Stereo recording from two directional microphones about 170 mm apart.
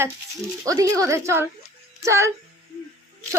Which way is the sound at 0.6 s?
20° right (ahead or behind).